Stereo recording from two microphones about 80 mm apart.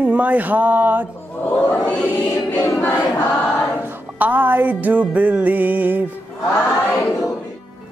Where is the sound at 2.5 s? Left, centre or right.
Left.